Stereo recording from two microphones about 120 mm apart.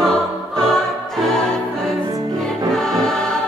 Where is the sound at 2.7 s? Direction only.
5° left (ahead or behind).